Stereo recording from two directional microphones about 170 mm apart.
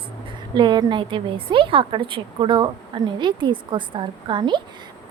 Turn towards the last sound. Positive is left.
turn(degrees=-30)  # may be behind; listen again after turning